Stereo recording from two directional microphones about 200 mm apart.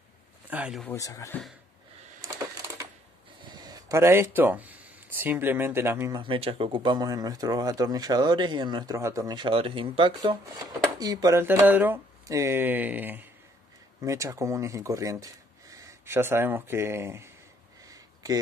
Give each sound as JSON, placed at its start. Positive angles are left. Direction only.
{"t": 0.5, "sound": "speech", "side_deg": -5}
{"t": 0.8, "sound": "speech", "side_deg": 15}
{"t": 2.2, "sound": "crushing", "side_deg": -15}
{"t": 3.5, "sound": "speech", "side_deg": -20}
{"t": 6.1, "sound": "speech", "side_deg": -25}
{"t": 17.8, "sound": "a sound", "side_deg": -20}